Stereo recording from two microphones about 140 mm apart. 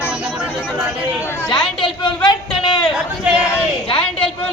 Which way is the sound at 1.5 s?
35° left (ahead or behind).